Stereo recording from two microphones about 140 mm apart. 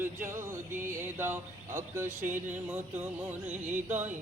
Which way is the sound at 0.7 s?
65° right (ahead or behind).